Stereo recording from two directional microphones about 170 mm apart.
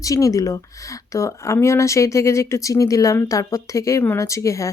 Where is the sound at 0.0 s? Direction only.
20° left (ahead or behind).